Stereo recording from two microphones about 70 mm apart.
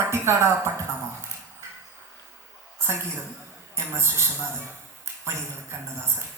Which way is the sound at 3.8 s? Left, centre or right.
Right.